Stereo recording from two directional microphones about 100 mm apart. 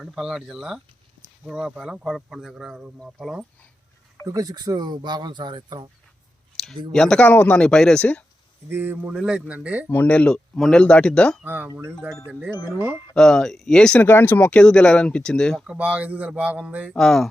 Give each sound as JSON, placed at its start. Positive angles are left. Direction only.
{"t": 0.0, "sound": "speech", "side_deg": -5}
{"t": 4.3, "sound": "speech", "side_deg": -40}
{"t": 6.6, "sound": "a sound", "side_deg": 5}
{"t": 6.9, "sound": "speech", "side_deg": 5}
{"t": 8.7, "sound": "speech", "side_deg": -20}
{"t": 9.8, "sound": "speech", "side_deg": 15}
{"t": 11.4, "sound": "speech", "side_deg": -15}
{"t": 13.1, "sound": "speech", "side_deg": 5}
{"t": 14.1, "sound": "speech", "side_deg": 20}
{"t": 14.5, "sound": "speech", "side_deg": 10}
{"t": 15.6, "sound": "speech", "side_deg": -10}
{"t": 16.9, "sound": "speech", "side_deg": 5}